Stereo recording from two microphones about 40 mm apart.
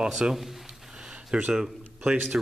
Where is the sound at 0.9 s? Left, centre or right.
Centre.